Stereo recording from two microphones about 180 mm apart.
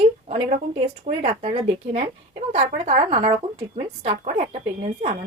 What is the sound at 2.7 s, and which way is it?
A woman's voice, 35° right (ahead or behind).